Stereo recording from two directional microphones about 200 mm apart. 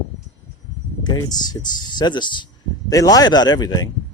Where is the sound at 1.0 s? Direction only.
20° left (ahead or behind).